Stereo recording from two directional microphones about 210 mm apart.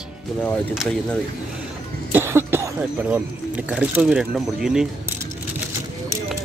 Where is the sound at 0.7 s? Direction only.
Centre (ahead or behind).